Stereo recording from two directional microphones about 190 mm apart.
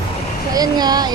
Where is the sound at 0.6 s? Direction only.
20° right (ahead or behind).